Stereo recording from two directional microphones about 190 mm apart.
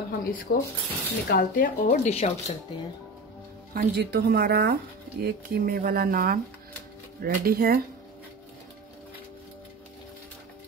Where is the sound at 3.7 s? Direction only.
55° right (ahead or behind).